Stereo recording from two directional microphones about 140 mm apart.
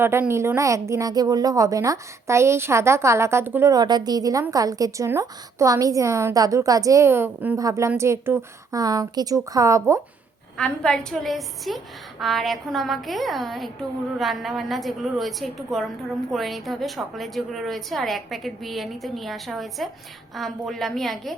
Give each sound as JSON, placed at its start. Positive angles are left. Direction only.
{"t": 0.0, "sound": "a woman's voice", "side_deg": -15}
{"t": 3.7, "sound": "a woman's voice", "side_deg": -30}
{"t": 10.6, "sound": "a woman's voice", "side_deg": 5}